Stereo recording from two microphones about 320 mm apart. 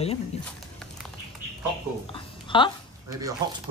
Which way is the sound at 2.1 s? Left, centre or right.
Centre.